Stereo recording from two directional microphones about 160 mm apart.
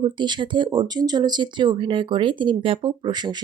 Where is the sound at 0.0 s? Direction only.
30° right (ahead or behind).